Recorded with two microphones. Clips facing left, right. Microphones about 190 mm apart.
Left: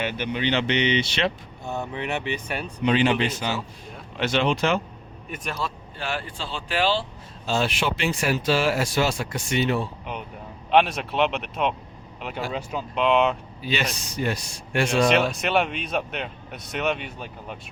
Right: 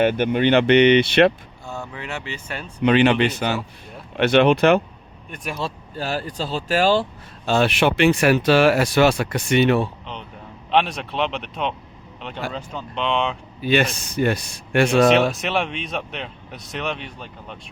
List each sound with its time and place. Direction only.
0.0 s speech: 50° right (ahead or behind)
1.6 s speech: 20° left (ahead or behind)
2.8 s speech: 65° right (ahead or behind)
5.6 s speech: 30° right (ahead or behind)
6.0 s speech: 40° right (ahead or behind)
7.4 s speech: 65° right (ahead or behind)
10.7 s speech: centre (ahead or behind)
13.6 s speech: 55° right (ahead or behind)
15.1 s speech: centre (ahead or behind)